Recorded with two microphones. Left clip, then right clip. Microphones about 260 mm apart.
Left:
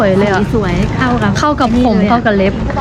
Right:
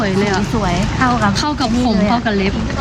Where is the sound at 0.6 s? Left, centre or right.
Centre.